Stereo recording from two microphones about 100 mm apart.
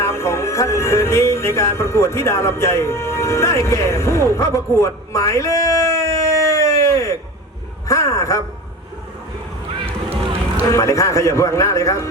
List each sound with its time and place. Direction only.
0.0 s music: 25° left (ahead or behind)
4.3 s a sound: 30° left (ahead or behind)
7.9 s a man's voice: 30° left (ahead or behind)
9.8 s boat: 80° right
10.7 s a man's voice: 30° left (ahead or behind)